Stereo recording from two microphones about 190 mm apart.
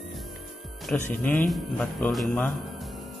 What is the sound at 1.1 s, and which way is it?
Speech, 10° left (ahead or behind).